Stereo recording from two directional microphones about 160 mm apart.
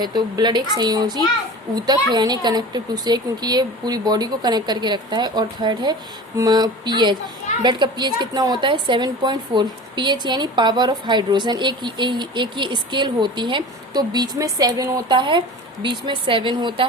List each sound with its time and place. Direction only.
0.0 s a woman's voice: 25° right (ahead or behind)